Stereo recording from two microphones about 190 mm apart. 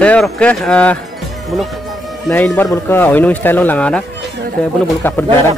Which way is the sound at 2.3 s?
10° left (ahead or behind).